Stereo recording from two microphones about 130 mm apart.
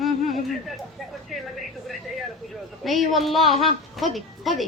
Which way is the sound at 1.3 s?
Centre (ahead or behind).